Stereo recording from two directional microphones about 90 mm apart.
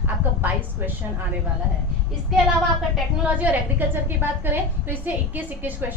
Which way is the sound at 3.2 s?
15° right (ahead or behind).